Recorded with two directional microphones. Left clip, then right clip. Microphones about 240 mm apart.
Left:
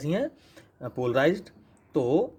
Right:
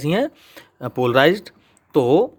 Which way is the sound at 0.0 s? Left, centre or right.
Right.